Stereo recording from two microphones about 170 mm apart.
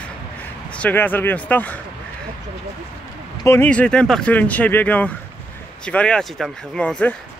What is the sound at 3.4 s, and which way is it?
Speech, 10° left (ahead or behind).